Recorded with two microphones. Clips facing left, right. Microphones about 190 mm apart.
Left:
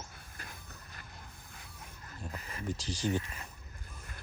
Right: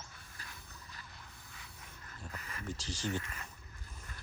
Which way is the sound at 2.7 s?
15° left (ahead or behind).